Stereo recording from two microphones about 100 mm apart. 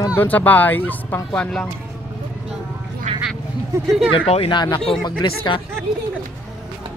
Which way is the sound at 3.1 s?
90° right.